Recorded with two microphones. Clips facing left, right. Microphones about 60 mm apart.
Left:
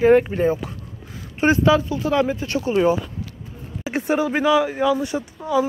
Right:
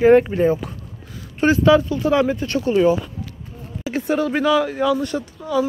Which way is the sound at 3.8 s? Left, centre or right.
Left.